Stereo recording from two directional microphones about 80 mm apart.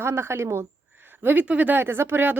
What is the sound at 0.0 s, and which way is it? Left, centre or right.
Speech, right.